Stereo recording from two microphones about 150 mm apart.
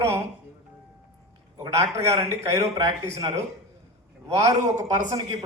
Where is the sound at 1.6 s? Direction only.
20° right (ahead or behind).